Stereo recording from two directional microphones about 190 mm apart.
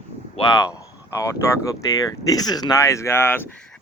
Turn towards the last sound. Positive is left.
turn(degrees=10)  # may be behind; listen again after turning